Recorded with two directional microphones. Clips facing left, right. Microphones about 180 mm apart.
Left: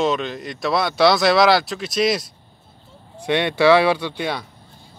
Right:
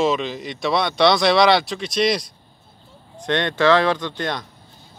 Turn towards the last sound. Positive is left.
turn(degrees=10)  # may be behind; listen again after turning